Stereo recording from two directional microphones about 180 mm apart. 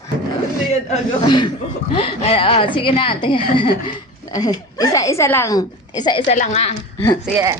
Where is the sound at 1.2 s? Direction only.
25° left (ahead or behind).